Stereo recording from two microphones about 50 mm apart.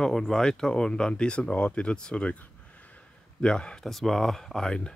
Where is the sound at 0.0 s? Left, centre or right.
Centre; by 3.0 s left.